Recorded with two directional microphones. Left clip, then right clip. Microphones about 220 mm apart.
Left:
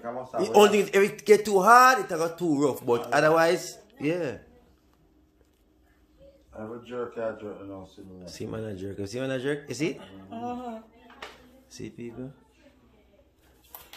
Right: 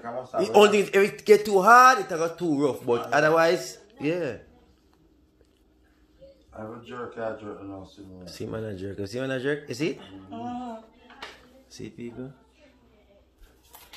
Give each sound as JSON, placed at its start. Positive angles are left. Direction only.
{"t": 0.0, "sound": "a man's voice", "side_deg": 0}
{"t": 7.8, "sound": "a man's voice", "side_deg": -5}
{"t": 10.3, "sound": "speech", "side_deg": 50}
{"t": 11.7, "sound": "a man's voice", "side_deg": 0}